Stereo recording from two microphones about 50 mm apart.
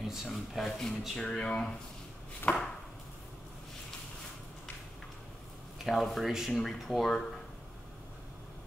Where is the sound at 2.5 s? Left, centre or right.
Centre.